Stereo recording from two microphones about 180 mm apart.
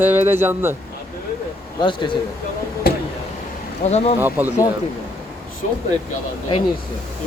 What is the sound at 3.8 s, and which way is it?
Speech, 35° left (ahead or behind).